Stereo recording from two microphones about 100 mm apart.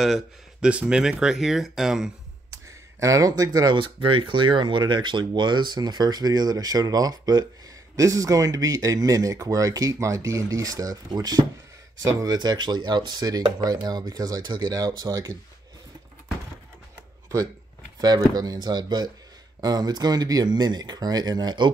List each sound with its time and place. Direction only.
0.0 s speech: centre (ahead or behind)
0.7 s speech: 10° right (ahead or behind)
2.5 s speech: 30° right (ahead or behind)
3.8 s speech: 60° right (ahead or behind); by 12.4 s 35° right (ahead or behind)
12.4 s speech: 45° right (ahead or behind)
18.0 s speech: 40° right (ahead or behind)